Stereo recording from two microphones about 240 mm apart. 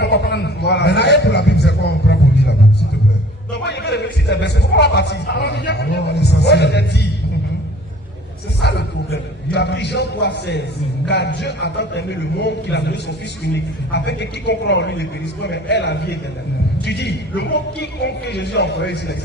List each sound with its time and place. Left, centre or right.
0.0 s a man's voice: left
3.6 s speech: left
8.6 s speech: left